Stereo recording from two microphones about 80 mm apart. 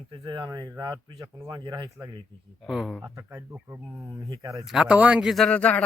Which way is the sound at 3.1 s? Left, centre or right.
Right.